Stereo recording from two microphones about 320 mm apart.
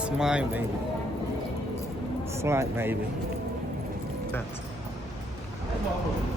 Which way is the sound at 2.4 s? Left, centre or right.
Centre.